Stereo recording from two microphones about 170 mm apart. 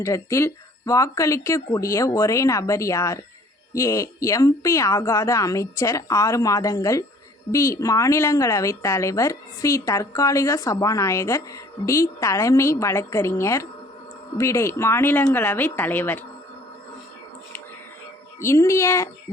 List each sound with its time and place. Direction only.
0.0 s a woman's voice: 15° left (ahead or behind)
18.3 s a woman's voice: 15° left (ahead or behind)